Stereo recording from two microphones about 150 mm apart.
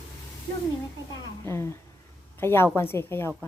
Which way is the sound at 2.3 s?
15° left (ahead or behind).